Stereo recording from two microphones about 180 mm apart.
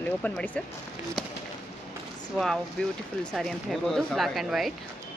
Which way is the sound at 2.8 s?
5° left (ahead or behind).